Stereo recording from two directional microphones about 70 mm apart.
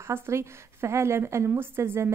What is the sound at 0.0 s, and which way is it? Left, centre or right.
Speech, right.